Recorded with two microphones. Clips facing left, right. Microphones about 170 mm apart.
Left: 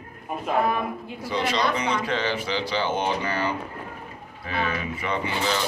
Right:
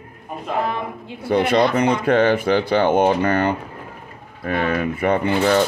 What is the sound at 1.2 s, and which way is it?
Speech, 55° right (ahead or behind).